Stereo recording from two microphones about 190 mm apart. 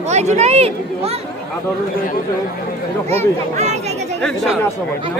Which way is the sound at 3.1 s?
35° right (ahead or behind).